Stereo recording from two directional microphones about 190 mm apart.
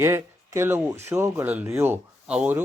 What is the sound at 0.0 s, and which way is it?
Speech, 15° right (ahead or behind).